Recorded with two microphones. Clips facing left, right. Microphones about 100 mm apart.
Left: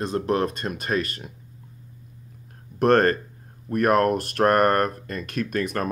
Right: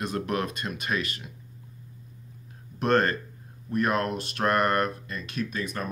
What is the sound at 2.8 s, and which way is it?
Speech, 45° left (ahead or behind).